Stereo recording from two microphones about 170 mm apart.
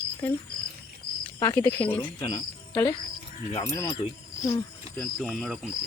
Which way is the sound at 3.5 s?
15° left (ahead or behind).